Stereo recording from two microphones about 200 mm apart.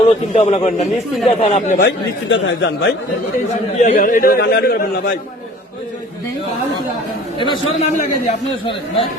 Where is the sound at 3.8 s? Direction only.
45° left (ahead or behind).